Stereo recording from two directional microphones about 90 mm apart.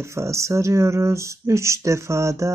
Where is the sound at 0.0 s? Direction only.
35° right (ahead or behind).